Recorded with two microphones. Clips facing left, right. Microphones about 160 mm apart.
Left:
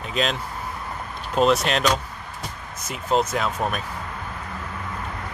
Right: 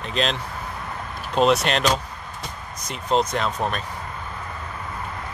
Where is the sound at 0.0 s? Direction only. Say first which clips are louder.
Even; 5° left (ahead or behind).